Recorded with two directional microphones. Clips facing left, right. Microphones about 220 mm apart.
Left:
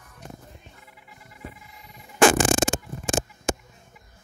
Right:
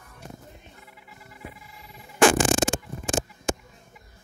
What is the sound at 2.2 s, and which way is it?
Music, 50° left (ahead or behind).